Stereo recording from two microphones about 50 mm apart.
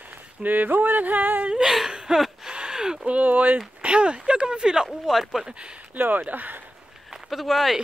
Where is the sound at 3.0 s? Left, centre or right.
Right.